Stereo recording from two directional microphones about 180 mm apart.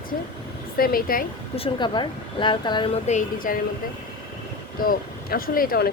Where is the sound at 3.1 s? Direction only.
45° left (ahead or behind).